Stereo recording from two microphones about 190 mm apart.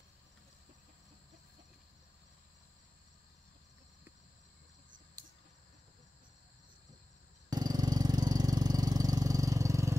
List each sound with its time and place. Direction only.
7.4 s vehicle: 20° right (ahead or behind)